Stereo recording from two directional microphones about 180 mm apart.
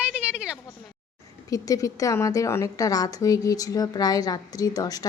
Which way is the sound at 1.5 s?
20° left (ahead or behind).